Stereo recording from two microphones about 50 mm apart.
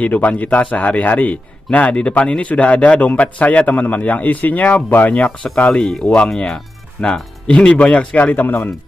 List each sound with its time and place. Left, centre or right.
0.0 s a man's voice: left
5.1 s a man's voice: left
5.7 s speech: centre; by 8.5 s left